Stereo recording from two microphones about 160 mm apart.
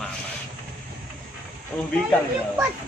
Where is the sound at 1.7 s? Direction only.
5° left (ahead or behind).